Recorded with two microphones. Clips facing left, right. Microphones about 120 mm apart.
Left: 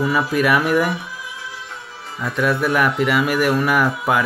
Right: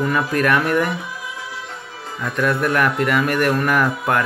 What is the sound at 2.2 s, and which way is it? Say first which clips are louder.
Speech: even; 5° left (ahead or behind).